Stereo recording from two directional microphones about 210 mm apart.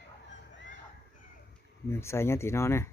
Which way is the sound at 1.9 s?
10° left (ahead or behind).